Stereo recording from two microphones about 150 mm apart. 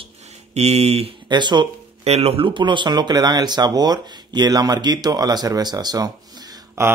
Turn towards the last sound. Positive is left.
turn(degrees=-20)  # may be behind; listen again after turning